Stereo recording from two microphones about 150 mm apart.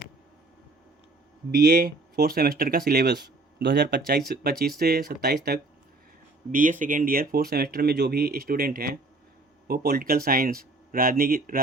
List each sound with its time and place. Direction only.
1.5 s speech: 90° right
6.5 s speech: 60° right (ahead or behind); by 9.0 s 75° right (ahead or behind)
9.6 s speech: 90° right; by 11.6 s 75° right (ahead or behind)